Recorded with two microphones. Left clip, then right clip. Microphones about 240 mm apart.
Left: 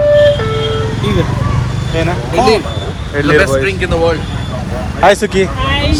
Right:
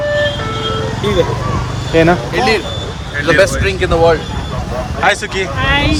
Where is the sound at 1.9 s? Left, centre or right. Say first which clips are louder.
Right 6 dB; right.